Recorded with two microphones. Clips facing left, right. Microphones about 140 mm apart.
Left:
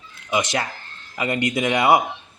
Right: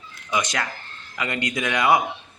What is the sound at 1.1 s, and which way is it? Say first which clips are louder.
Speech: left 4 dB; 25° left (ahead or behind).